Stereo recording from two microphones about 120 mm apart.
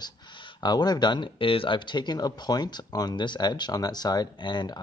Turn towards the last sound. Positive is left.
turn(degrees=40)  # may be behind; listen again after turning